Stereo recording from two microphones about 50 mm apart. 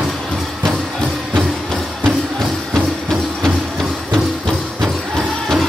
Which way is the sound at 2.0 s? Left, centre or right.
Centre.